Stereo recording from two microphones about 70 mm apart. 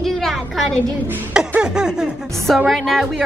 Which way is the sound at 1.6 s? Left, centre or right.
Centre.